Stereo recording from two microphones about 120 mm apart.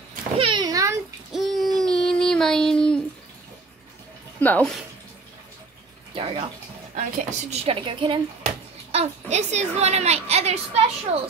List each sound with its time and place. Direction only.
0.4 s a sound: 45° right (ahead or behind)
0.7 s a sound: 30° right (ahead or behind)
1.3 s child singing: centre (ahead or behind)
4.4 s speech: 10° left (ahead or behind)
6.1 s bathtub: 50° right (ahead or behind)
7.0 s speech: 90° right
7.6 s a woman's voice: 45° right (ahead or behind)
8.5 s a child's voice: 65° right (ahead or behind)